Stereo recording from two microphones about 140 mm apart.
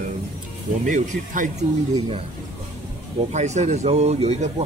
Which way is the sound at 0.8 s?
65° right (ahead or behind).